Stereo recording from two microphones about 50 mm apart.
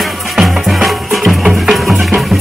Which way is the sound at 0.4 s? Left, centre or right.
Centre.